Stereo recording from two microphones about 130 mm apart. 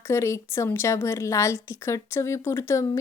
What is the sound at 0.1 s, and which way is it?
A woman's voice, 20° left (ahead or behind).